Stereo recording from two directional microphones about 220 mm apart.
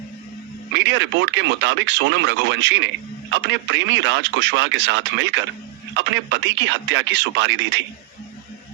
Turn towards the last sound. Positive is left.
turn(degrees=-55)  # may be behind; listen again after turning